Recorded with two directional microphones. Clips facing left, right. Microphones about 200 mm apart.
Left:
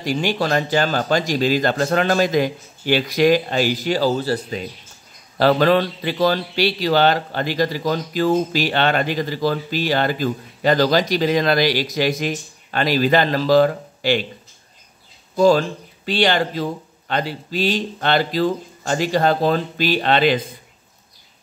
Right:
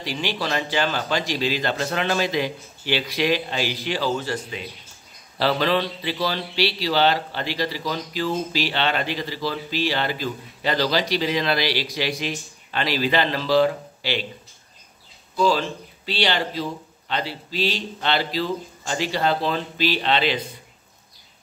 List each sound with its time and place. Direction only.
0.0 s speech: 45° left (ahead or behind)
5.4 s speech: 50° left (ahead or behind)
15.3 s speech: 45° left (ahead or behind)